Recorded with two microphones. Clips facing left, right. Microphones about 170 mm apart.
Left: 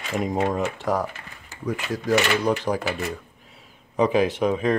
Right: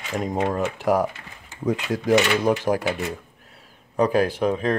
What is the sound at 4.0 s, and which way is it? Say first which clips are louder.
Speech: even; centre (ahead or behind).